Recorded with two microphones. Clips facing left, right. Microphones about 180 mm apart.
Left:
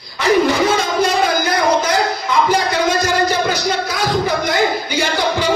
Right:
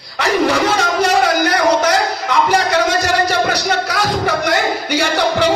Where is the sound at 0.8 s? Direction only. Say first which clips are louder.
Right 1 dB; 70° right (ahead or behind).